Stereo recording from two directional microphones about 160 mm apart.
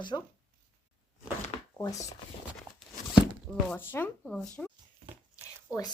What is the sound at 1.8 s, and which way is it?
Speech, 20° left (ahead or behind).